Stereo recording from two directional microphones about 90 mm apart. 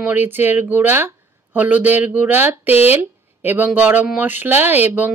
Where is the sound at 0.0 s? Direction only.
20° right (ahead or behind).